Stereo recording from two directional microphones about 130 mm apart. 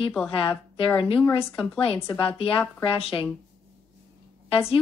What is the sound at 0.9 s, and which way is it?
Speech, 45° left (ahead or behind).